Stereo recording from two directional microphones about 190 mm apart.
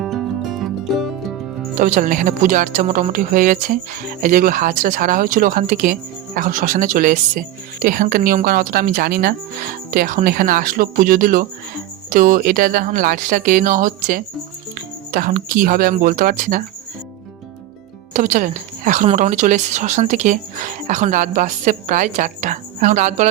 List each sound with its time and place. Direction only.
0.0 s music: centre (ahead or behind)
1.8 s speech: 45° right (ahead or behind)
18.1 s speech: 40° right (ahead or behind)